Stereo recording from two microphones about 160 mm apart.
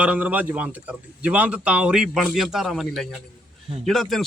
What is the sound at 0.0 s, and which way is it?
Speech, 10° right (ahead or behind).